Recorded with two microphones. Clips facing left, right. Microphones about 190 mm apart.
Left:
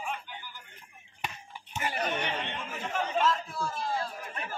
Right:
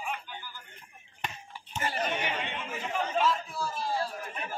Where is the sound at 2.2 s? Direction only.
5° right (ahead or behind).